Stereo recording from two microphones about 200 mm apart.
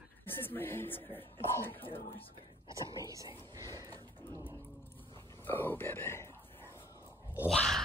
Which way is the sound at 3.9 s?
10° left (ahead or behind).